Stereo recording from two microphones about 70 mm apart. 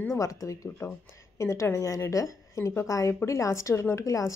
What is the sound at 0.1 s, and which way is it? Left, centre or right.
A woman's voice, left.